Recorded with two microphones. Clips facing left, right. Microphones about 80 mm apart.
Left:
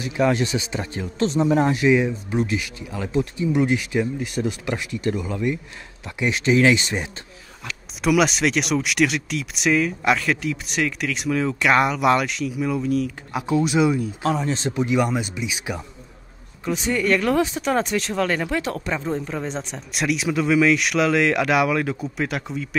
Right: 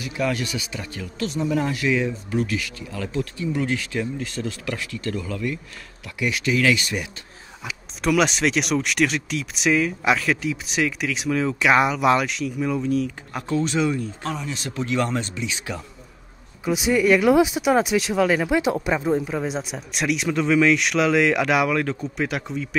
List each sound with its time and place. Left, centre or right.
0.0 s speech: left
1.8 s speech: left
8.0 s speech: centre
14.2 s speech: left
14.5 s speech: left
14.8 s speech: centre
16.6 s speech: centre